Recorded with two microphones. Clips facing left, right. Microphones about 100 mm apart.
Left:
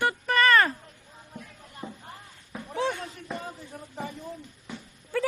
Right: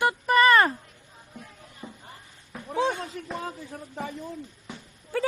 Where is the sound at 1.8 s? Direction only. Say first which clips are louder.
Left 3 dB; 15° left (ahead or behind).